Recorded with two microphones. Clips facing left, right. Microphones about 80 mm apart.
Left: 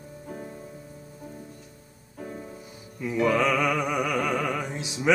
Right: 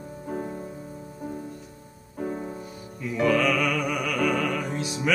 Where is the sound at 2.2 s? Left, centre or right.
Right.